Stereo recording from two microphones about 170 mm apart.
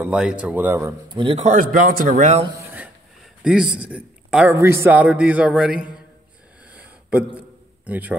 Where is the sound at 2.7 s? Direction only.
5° right (ahead or behind).